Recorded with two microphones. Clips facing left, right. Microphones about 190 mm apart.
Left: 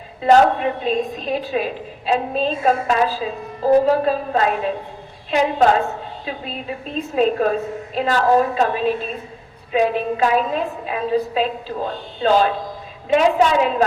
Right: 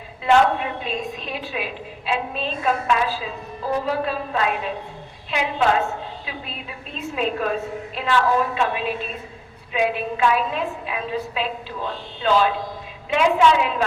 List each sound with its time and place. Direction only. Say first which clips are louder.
0.2 s a woman's voice: left 4 dB; 40° left (ahead or behind)